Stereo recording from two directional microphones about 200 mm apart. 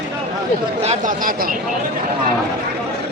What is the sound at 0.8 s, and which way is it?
Speech, 35° right (ahead or behind).